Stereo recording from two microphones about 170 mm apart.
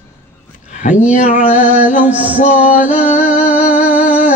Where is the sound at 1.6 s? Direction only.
10° right (ahead or behind).